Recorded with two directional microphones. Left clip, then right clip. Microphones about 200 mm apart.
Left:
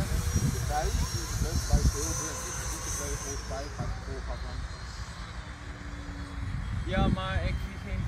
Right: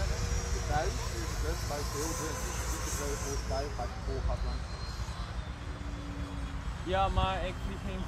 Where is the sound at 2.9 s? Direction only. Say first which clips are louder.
Right 1 dB; 15° right (ahead or behind).